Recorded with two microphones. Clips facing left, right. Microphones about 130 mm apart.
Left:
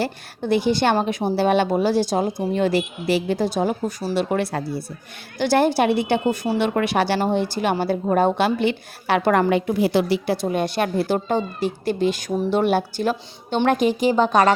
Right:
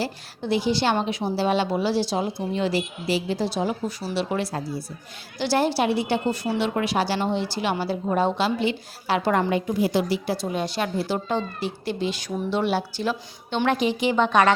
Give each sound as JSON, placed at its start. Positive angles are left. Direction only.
{"t": 0.0, "sound": "a woman's voice", "side_deg": 55}
{"t": 4.5, "sound": "a woman's voice", "side_deg": 65}
{"t": 5.4, "sound": "a woman's voice", "side_deg": 50}